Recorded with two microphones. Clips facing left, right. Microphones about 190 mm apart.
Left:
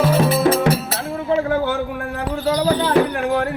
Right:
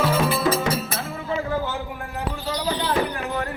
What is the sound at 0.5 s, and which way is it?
Music, 60° left (ahead or behind).